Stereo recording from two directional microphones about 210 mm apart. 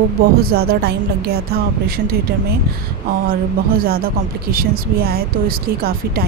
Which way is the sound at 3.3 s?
45° right (ahead or behind).